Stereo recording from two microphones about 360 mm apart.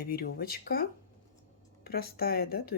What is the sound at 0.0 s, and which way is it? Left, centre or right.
Speech, left.